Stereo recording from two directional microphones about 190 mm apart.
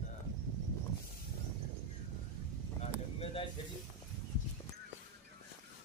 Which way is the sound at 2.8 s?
30° left (ahead or behind).